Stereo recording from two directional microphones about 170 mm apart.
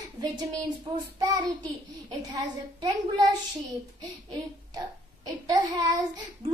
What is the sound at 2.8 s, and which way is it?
Child singing, 25° right (ahead or behind).